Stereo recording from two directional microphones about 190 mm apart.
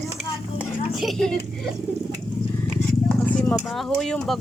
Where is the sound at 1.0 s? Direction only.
Centre (ahead or behind).